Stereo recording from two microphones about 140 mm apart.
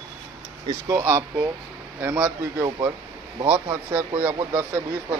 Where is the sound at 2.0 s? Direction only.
15° right (ahead or behind).